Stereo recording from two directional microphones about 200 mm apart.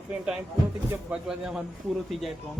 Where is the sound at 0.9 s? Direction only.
5° right (ahead or behind).